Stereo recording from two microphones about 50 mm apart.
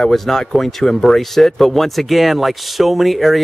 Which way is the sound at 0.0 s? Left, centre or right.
Centre.